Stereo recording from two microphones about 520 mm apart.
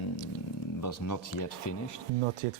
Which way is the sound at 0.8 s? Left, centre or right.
Left.